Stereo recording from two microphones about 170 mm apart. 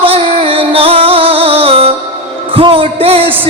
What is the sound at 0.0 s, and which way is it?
Music, 35° right (ahead or behind).